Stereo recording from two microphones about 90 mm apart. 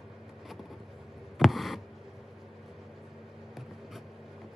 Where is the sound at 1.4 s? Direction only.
Centre (ahead or behind).